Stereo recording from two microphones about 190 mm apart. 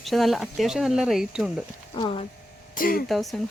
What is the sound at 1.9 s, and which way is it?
Speech, 25° left (ahead or behind).